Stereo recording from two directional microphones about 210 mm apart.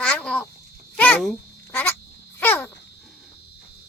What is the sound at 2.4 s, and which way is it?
Dog, 10° left (ahead or behind).